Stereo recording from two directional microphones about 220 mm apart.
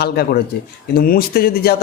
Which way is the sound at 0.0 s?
45° left (ahead or behind).